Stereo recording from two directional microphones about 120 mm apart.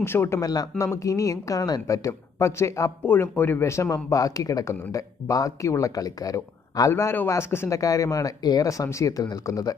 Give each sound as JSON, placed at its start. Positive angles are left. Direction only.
{"t": 0.0, "sound": "speech", "side_deg": 20}